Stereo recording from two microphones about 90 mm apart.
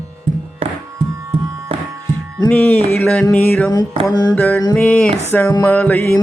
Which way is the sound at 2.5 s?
15° left (ahead or behind).